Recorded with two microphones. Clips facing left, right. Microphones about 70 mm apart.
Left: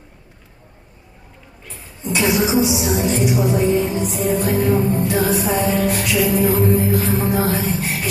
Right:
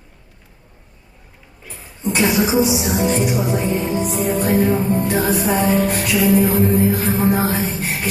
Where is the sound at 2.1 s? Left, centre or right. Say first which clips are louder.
Right 1 dB; right.